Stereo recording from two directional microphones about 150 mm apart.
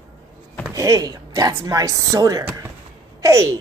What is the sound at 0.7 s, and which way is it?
A woman's voice, 25° right (ahead or behind).